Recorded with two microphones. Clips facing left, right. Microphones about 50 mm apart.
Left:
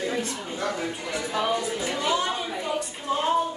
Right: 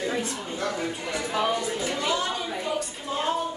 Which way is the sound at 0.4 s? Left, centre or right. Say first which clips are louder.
Even; centre.